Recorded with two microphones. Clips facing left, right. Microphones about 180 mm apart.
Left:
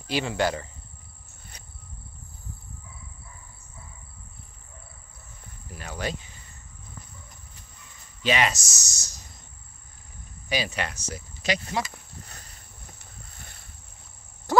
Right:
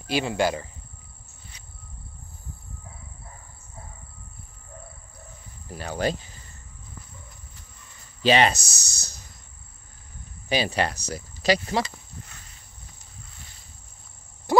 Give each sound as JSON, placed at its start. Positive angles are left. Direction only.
{"t": 0.1, "sound": "cricket", "side_deg": -15}
{"t": 5.8, "sound": "speech", "side_deg": -35}
{"t": 8.2, "sound": "speech", "side_deg": -30}
{"t": 8.5, "sound": "a sound", "side_deg": -60}
{"t": 10.5, "sound": "speech", "side_deg": -30}
{"t": 13.4, "sound": "boat", "side_deg": 55}
{"t": 14.5, "sound": "frog", "side_deg": -15}